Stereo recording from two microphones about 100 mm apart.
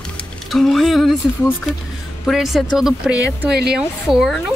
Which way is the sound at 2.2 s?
Centre (ahead or behind).